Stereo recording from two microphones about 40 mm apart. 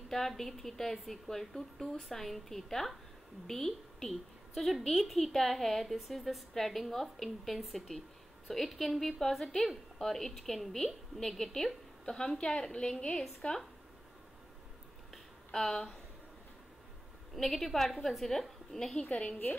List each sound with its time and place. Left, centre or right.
0.4 s a woman's voice: centre
13.4 s speech: left
15.5 s a woman's voice: centre
17.4 s a woman's voice: centre
19.0 s a woman's voice: left